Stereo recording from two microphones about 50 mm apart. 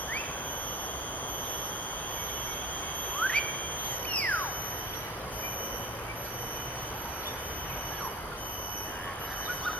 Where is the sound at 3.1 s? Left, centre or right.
Left.